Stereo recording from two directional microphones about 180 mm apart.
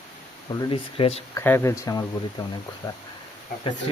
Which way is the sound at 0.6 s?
30° left (ahead or behind).